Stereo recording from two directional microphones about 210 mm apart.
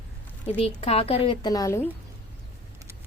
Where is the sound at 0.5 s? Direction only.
30° left (ahead or behind).